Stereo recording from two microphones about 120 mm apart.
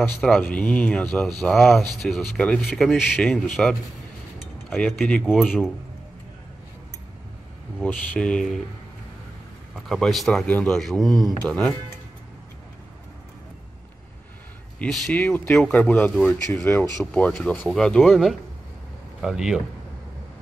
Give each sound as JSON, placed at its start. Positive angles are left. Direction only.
{"t": 0.2, "sound": "speech", "side_deg": 10}
{"t": 7.8, "sound": "speech", "side_deg": 10}
{"t": 9.8, "sound": "speech", "side_deg": 5}
{"t": 14.8, "sound": "speech", "side_deg": 10}
{"t": 16.4, "sound": "speech", "side_deg": 20}
{"t": 17.0, "sound": "speech", "side_deg": 10}